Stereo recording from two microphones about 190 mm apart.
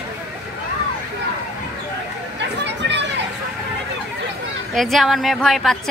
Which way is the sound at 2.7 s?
65° right (ahead or behind).